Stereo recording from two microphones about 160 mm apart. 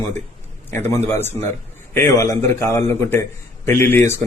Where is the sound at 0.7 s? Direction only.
15° left (ahead or behind).